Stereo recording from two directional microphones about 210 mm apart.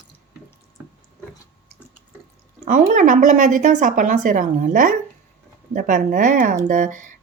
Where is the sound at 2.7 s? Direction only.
35° right (ahead or behind).